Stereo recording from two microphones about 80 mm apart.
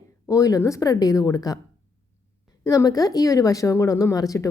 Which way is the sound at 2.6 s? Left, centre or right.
Left.